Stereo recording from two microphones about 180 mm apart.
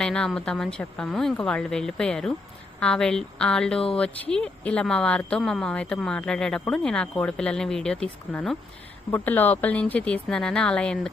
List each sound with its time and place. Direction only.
0.0 s speech: 5° left (ahead or behind)